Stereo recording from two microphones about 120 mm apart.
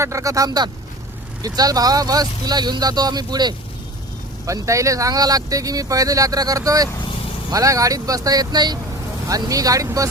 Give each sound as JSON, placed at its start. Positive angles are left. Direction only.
{"t": 0.0, "sound": "speech", "side_deg": -25}